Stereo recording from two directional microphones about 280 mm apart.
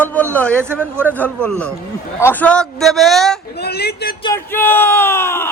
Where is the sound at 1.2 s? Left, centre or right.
Centre.